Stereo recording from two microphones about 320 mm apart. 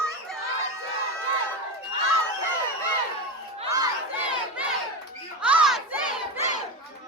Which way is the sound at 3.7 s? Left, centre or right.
Centre.